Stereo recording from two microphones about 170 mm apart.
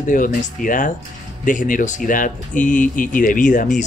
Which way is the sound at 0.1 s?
50° left (ahead or behind).